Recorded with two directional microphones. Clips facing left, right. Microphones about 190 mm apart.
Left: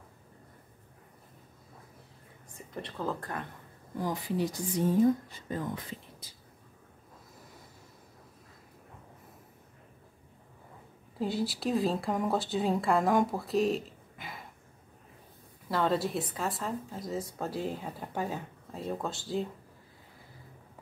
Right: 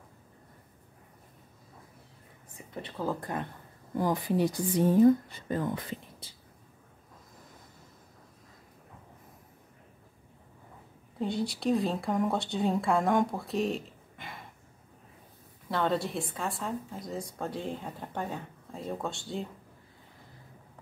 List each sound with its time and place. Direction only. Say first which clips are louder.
2.5 s speech: even; 5° right (ahead or behind)
4.0 s a woman's voice: right 4 dB; 60° right (ahead or behind)
11.1 s a woman's voice: even; 5° left (ahead or behind)
15.7 s a woman's voice: left 1 dB; centre (ahead or behind)